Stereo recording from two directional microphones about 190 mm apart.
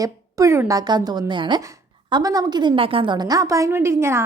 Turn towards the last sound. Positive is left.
turn(degrees=-15)  # may be behind; listen again after turning